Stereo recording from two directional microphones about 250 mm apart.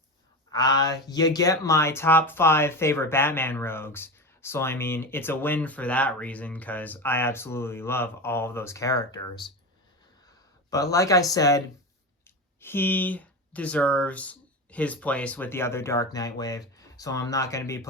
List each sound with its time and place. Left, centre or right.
0.5 s speech: centre
10.9 s speech: centre